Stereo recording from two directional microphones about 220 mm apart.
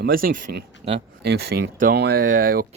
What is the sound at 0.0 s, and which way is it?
Speech, 40° right (ahead or behind).